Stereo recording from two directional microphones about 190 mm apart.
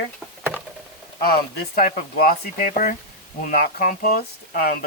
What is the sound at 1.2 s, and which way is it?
Speech, 55° left (ahead or behind).